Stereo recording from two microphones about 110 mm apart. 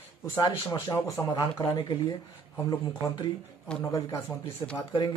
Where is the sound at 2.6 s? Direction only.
25° left (ahead or behind).